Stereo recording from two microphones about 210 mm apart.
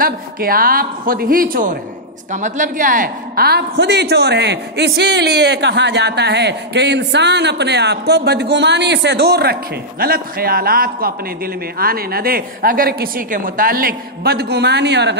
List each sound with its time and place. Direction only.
0.0 s a woman's voice: 45° right (ahead or behind)